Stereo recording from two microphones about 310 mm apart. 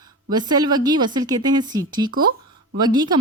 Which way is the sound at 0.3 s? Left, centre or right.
Centre.